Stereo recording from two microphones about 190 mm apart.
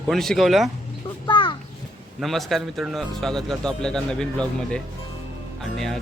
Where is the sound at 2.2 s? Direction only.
Centre (ahead or behind).